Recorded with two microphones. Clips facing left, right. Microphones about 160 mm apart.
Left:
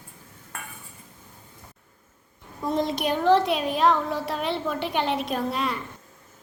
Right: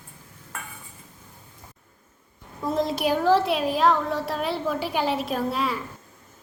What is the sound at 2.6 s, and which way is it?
A woman's voice, centre (ahead or behind).